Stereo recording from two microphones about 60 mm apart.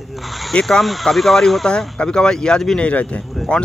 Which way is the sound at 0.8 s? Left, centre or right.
Centre.